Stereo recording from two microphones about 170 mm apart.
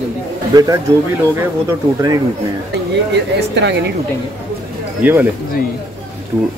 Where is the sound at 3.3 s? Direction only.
85° right.